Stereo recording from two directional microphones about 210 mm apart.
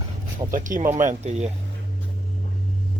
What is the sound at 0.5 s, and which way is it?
Speech, 40° right (ahead or behind).